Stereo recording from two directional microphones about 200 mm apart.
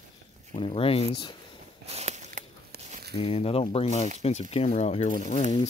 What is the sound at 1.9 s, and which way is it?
Biting, 35° right (ahead or behind).